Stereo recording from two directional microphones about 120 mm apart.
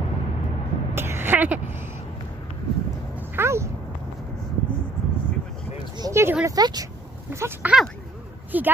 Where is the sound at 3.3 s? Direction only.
20° right (ahead or behind).